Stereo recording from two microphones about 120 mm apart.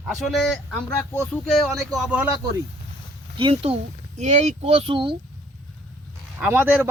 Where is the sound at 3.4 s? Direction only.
50° right (ahead or behind).